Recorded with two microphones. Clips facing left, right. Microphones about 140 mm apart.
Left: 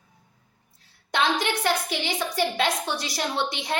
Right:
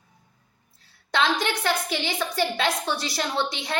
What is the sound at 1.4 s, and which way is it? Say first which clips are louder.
A woman's voice: even; 15° left (ahead or behind).